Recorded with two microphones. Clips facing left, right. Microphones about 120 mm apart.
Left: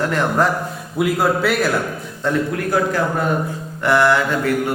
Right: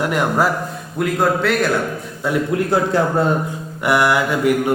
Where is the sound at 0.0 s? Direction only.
15° right (ahead or behind).